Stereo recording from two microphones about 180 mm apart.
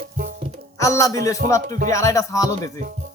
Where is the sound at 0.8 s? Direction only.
20° left (ahead or behind).